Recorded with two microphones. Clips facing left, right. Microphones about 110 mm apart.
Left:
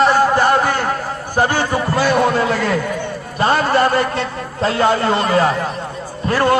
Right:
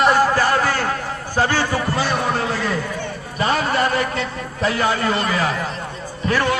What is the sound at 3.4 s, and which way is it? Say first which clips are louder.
A man's voice: left 5 dB; 40° left (ahead or behind).